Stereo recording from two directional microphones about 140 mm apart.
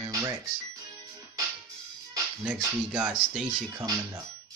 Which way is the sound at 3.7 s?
25° right (ahead or behind).